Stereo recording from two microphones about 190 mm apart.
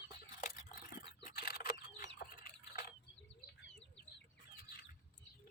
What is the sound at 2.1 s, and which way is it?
Rodents, 55° left (ahead or behind).